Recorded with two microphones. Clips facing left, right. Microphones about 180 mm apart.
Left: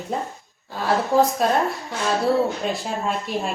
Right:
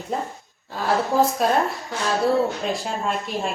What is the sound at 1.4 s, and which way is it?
Speech, centre (ahead or behind).